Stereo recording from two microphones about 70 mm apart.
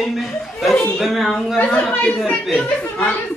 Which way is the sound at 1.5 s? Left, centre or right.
Left.